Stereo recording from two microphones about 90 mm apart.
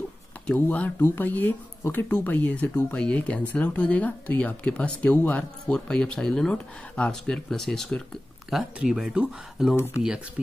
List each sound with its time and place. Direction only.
0.6 s speech: 20° left (ahead or behind); by 9.8 s 10° right (ahead or behind)